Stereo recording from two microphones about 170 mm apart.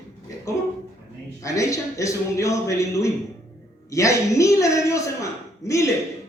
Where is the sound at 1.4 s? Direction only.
20° left (ahead or behind).